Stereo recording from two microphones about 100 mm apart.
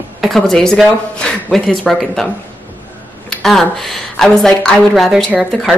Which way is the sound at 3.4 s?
5° left (ahead or behind).